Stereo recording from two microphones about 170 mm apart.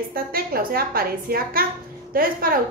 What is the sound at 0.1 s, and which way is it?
A woman's voice, 60° right (ahead or behind).